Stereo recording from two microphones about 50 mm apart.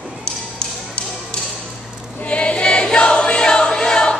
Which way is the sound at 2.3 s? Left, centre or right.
Left.